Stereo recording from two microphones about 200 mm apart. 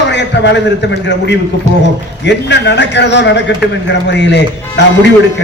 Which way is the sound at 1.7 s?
35° right (ahead or behind).